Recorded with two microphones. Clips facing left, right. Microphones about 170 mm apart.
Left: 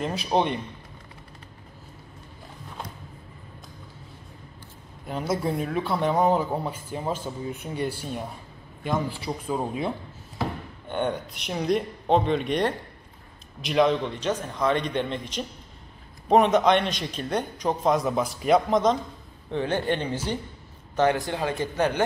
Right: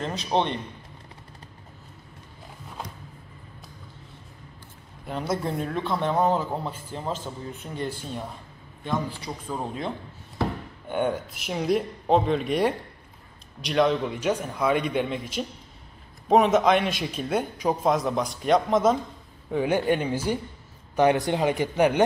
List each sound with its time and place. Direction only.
0.0 s speech: 10° left (ahead or behind)
5.0 s speech: centre (ahead or behind)
10.9 s speech: 5° right (ahead or behind)